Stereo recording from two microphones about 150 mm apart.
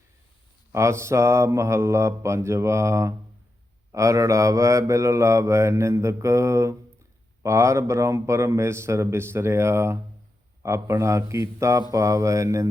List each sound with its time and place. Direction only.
0.7 s mantra: 20° right (ahead or behind)